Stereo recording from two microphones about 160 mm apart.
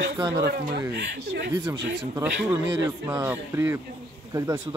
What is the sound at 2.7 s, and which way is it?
Speech, 20° right (ahead or behind).